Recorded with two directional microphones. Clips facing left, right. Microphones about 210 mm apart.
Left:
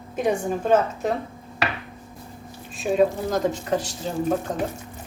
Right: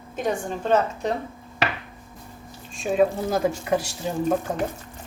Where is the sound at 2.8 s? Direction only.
Centre (ahead or behind).